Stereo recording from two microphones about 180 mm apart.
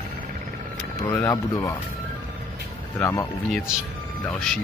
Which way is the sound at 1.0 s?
15° left (ahead or behind).